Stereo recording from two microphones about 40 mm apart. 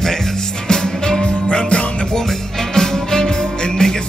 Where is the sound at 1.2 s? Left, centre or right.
Left.